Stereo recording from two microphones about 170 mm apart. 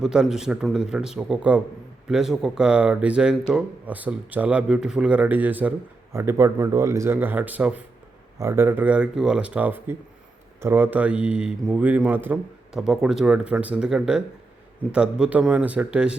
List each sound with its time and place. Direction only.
0.0 s speech: 5° right (ahead or behind)